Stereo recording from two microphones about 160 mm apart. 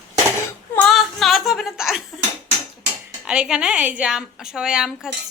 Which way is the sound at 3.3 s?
5° right (ahead or behind).